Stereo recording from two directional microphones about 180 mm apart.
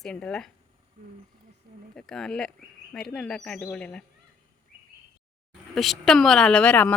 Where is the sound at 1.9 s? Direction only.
5° left (ahead or behind).